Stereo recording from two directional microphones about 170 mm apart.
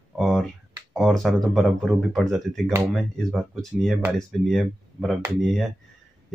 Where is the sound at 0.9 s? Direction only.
Centre (ahead or behind).